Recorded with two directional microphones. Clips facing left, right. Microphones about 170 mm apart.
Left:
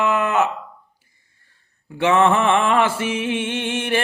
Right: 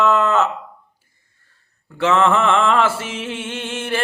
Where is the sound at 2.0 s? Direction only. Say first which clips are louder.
Even; 20° left (ahead or behind).